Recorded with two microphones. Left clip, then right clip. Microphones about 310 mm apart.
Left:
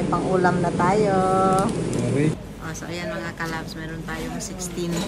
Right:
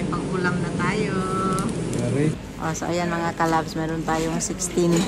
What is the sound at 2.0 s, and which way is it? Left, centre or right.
Speech, centre.